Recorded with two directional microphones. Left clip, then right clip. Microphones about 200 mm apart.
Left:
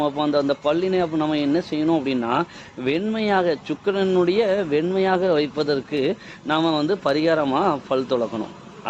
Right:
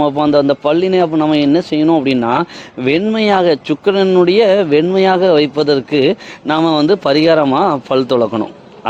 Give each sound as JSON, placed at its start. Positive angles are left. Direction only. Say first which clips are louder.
{"t": 0.0, "sound": "a man's voice", "louder": "right 9 dB", "side_deg": -50}